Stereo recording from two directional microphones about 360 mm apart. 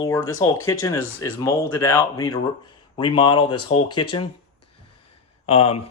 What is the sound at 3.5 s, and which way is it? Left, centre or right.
Speech, left.